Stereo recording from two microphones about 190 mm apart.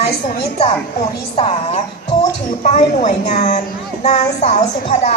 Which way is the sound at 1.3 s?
30° left (ahead or behind).